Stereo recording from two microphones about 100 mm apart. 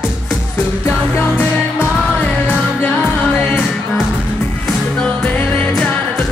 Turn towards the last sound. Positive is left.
turn(degrees=10)  # may be behind; listen again after turning